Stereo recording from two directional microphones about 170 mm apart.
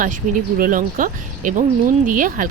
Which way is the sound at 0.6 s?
50° right (ahead or behind).